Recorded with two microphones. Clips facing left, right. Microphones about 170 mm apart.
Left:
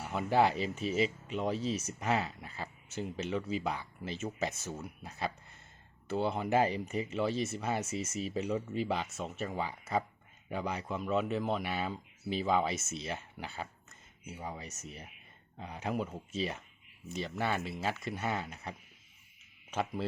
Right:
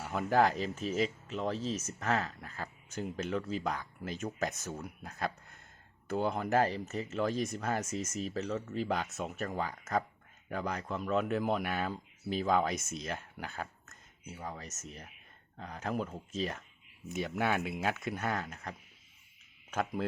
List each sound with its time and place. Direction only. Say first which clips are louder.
0.0 s a sound: right 1 dB; 5° left (ahead or behind)
0.3 s speech: even; 10° left (ahead or behind)
12.8 s speech: even; 50° right (ahead or behind)
13.1 s speech: right 1 dB; 5° left (ahead or behind)
17.2 s speech: right 2 dB; 5° right (ahead or behind)